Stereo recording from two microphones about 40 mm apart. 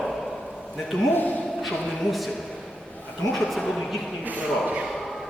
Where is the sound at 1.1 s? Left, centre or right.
Left.